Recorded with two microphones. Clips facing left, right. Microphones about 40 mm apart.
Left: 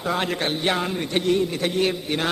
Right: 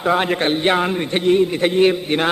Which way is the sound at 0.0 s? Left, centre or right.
Right.